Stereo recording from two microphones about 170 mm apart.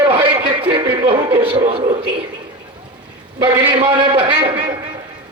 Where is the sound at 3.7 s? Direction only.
25° right (ahead or behind).